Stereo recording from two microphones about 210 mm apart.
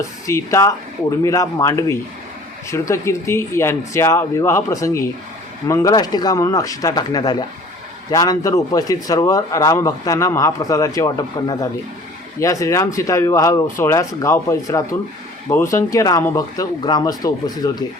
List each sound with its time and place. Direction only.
0.3 s a man's voice: 15° left (ahead or behind)